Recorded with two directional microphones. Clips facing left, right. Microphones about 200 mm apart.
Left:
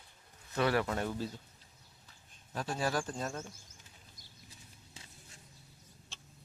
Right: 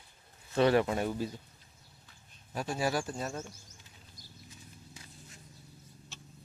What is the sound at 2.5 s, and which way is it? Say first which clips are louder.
Speech: right 2 dB; 10° right (ahead or behind).